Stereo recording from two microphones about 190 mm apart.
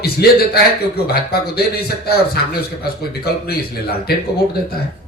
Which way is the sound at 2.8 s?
55° left (ahead or behind).